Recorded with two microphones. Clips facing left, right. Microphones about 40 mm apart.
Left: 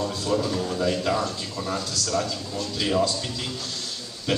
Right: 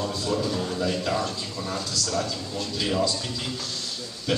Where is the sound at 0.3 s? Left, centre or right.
Centre.